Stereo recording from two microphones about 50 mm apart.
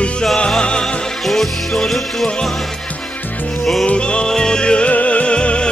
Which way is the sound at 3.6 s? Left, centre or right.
Centre.